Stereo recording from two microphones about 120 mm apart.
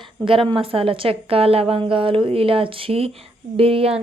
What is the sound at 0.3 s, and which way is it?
A woman's voice, 45° right (ahead or behind).